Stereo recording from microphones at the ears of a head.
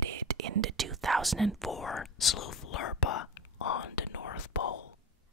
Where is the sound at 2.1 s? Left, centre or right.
Left.